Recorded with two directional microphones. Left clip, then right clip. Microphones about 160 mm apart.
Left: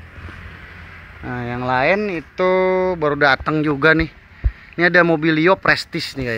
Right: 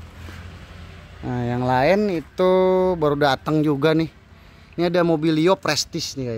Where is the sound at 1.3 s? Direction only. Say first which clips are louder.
Left 1 dB; 40° right (ahead or behind); by 6.3 s 5° right (ahead or behind).